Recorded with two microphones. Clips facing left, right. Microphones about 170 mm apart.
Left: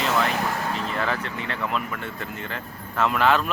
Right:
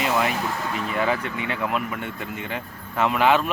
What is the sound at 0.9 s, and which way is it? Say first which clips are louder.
Speech: right 3 dB; 10° right (ahead or behind).